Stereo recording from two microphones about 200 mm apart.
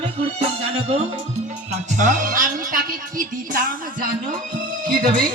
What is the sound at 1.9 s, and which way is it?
Speech, 40° right (ahead or behind).